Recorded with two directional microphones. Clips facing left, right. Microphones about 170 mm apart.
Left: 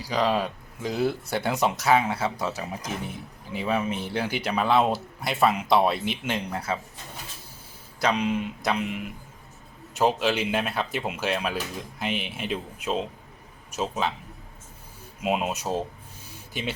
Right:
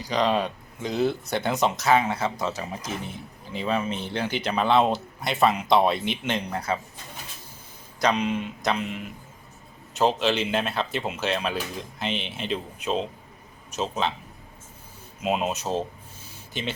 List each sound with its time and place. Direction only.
0.0 s speech: 5° left (ahead or behind)
7.9 s a man's voice: 5° left (ahead or behind)
15.2 s speech: 10° left (ahead or behind)